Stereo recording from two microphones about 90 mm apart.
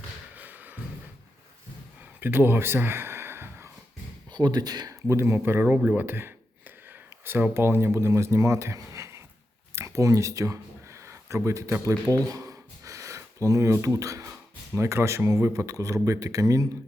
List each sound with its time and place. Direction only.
0.3 s music: 20° right (ahead or behind)
2.2 s a sound: 25° right (ahead or behind)
4.3 s speech: 50° right (ahead or behind)
5.0 s speech: 30° right (ahead or behind)
9.7 s a sound: 35° right (ahead or behind)
11.7 s speech: 40° right (ahead or behind)